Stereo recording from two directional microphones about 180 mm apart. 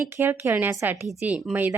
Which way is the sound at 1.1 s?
5° right (ahead or behind).